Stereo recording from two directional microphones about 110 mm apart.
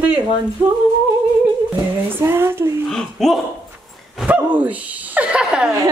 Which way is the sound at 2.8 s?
5° left (ahead or behind).